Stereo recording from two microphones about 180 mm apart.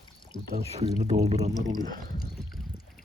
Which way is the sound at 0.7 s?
35° right (ahead or behind).